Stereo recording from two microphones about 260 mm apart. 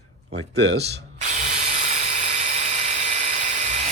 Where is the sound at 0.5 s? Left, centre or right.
Right.